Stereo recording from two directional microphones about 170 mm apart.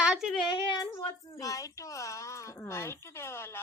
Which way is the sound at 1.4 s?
20° left (ahead or behind).